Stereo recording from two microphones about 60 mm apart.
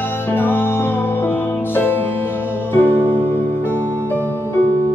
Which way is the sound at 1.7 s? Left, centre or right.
Left.